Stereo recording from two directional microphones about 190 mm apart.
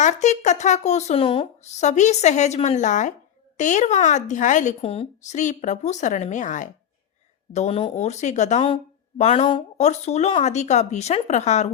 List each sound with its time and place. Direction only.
0.0 s speech: 40° left (ahead or behind)